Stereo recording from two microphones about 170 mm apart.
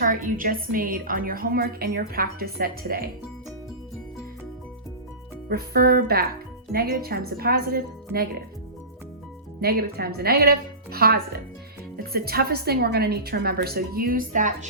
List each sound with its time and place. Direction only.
0.0 s a woman's voice: 55° right (ahead or behind)
5.5 s a woman's voice: 65° right (ahead or behind)
9.6 s a woman's voice: 65° right (ahead or behind); by 14.7 s 50° right (ahead or behind)